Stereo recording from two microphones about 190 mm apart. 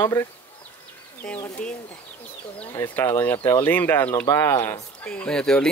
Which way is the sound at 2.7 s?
10° left (ahead or behind).